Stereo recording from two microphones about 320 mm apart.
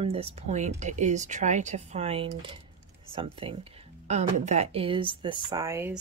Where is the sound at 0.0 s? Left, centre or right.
Centre.